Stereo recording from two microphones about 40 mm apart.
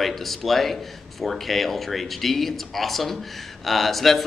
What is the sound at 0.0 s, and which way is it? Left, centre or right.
Speech, centre.